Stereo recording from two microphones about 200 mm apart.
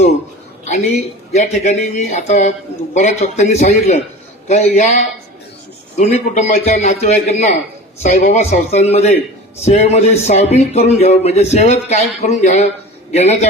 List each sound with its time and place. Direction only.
1.3 s speech: 35° left (ahead or behind)